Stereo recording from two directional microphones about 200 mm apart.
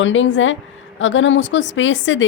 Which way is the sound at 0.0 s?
70° left (ahead or behind).